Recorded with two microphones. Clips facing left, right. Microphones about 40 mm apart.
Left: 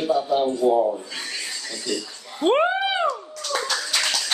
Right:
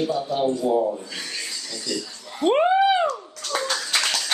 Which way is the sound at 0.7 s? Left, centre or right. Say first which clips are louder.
Left 2 dB; centre.